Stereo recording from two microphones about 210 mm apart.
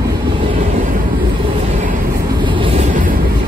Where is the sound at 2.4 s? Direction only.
25° right (ahead or behind).